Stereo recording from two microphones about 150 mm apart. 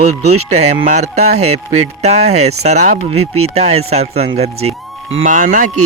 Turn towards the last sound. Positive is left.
turn(degrees=-55)  # may be behind; listen again after turning